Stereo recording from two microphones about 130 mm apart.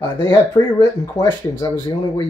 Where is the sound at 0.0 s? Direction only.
30° left (ahead or behind).